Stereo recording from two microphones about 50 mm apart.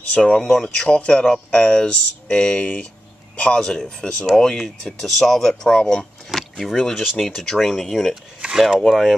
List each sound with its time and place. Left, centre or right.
0.1 s speech: centre
0.4 s speech: centre
0.8 s speech: left
6.3 s speech: centre
8.4 s a sound: centre
8.6 s speech: centre